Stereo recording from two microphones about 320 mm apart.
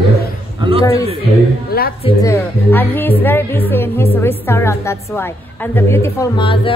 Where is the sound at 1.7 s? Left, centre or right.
Left.